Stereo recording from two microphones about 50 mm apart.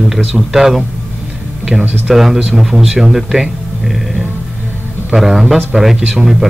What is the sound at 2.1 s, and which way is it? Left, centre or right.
Speech, centre.